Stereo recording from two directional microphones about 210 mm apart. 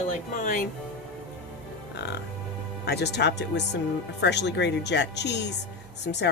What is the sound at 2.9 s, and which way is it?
Speech, 50° left (ahead or behind).